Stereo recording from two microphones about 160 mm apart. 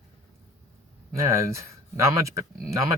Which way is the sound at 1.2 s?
20° right (ahead or behind).